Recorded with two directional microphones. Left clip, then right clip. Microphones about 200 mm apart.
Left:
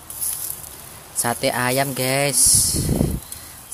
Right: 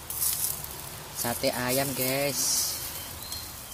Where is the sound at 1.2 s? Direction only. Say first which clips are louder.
Left 8 dB; 35° left (ahead or behind).